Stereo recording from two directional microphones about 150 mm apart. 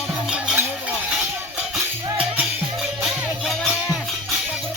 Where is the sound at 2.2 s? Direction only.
5° right (ahead or behind).